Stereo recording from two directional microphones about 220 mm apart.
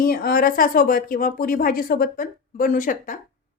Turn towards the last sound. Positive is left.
turn(degrees=35)  # may be behind; listen again after turning